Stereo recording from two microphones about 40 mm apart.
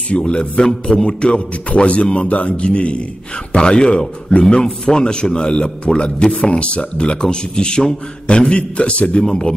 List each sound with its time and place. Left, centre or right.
0.4 s a man's voice: centre
9.2 s speech: centre